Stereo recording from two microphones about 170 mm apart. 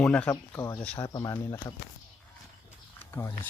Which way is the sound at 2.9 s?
10° left (ahead or behind).